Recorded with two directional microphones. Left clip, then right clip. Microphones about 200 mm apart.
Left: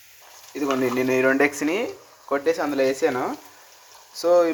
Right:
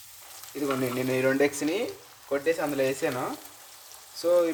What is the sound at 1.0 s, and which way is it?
Speech, 10° left (ahead or behind).